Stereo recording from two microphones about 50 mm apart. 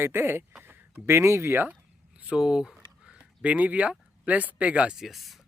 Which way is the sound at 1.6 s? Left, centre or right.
Right.